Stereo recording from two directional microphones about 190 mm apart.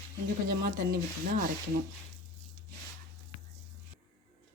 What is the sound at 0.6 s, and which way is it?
Speech, 55° right (ahead or behind).